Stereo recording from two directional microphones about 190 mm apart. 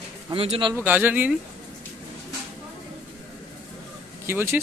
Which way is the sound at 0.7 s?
10° right (ahead or behind).